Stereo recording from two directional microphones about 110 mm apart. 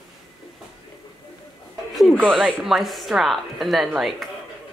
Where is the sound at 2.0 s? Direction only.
5° right (ahead or behind).